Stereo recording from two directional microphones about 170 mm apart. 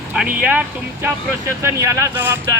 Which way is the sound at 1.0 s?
15° right (ahead or behind).